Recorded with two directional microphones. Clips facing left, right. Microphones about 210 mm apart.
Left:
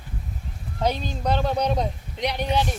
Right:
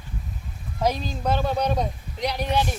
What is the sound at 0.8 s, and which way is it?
Speech, 5° right (ahead or behind).